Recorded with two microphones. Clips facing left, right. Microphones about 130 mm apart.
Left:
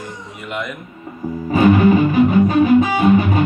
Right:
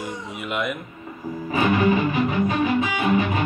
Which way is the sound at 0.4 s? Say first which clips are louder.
Even; 5° right (ahead or behind).